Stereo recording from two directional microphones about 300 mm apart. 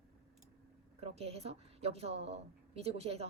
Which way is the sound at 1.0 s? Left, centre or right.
Right.